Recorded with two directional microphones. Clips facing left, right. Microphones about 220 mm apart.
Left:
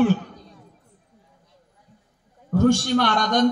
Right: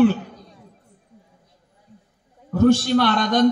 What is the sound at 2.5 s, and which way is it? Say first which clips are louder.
Speech: right 2 dB; 50° left (ahead or behind).